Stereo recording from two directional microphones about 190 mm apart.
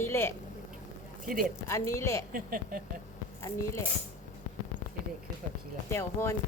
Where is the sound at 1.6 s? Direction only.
15° left (ahead or behind).